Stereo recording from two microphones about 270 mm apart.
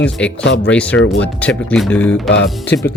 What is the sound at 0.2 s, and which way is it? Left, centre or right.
Speech, centre.